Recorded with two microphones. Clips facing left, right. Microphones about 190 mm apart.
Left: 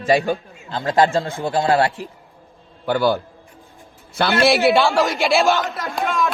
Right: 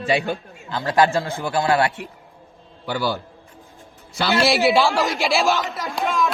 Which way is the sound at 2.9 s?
50° left (ahead or behind).